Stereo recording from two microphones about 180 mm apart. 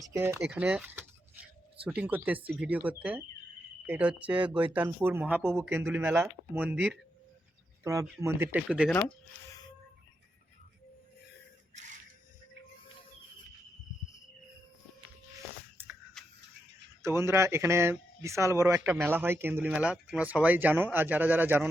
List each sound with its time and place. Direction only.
0.1 s speech: 15° right (ahead or behind)
8.0 s speech: 15° right (ahead or behind)
8.9 s speech: 5° left (ahead or behind)
11.7 s camera: 40° right (ahead or behind)
15.8 s a sound: 10° right (ahead or behind)
16.2 s a sound: centre (ahead or behind)
17.0 s speech: 15° right (ahead or behind)